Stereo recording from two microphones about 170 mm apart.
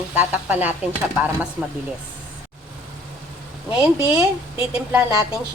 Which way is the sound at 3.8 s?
10° right (ahead or behind).